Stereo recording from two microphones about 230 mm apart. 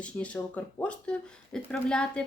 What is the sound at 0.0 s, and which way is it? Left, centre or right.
A woman's voice, centre.